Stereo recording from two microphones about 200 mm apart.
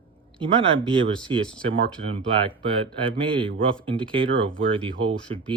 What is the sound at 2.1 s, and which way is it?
Speech, 25° right (ahead or behind).